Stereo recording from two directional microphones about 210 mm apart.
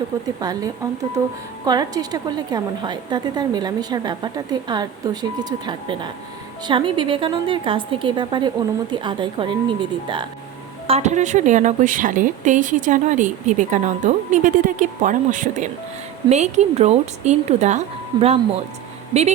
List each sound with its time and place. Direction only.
0.3 s a woman's voice: 20° right (ahead or behind)